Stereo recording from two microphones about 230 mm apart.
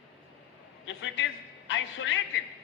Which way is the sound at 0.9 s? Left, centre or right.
Left.